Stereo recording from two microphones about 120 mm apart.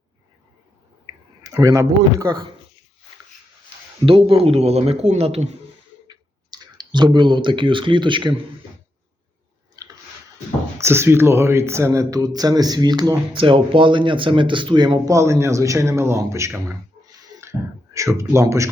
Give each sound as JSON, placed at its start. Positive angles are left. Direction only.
{"t": 1.5, "sound": "a man's voice", "side_deg": -30}
{"t": 4.0, "sound": "speech", "side_deg": -45}
{"t": 6.1, "sound": "clicking", "side_deg": -35}
{"t": 9.8, "sound": "a sound", "side_deg": -30}
{"t": 10.8, "sound": "speech", "side_deg": -20}
{"t": 15.1, "sound": "a man's voice", "side_deg": -25}
{"t": 17.1, "sound": "a sound", "side_deg": -25}